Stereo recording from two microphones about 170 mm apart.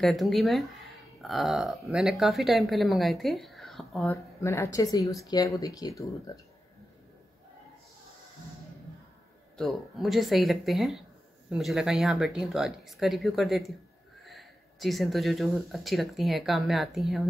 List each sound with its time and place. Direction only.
0.0 s speech: centre (ahead or behind)
4.1 s speech: 15° left (ahead or behind)
9.6 s speech: centre (ahead or behind)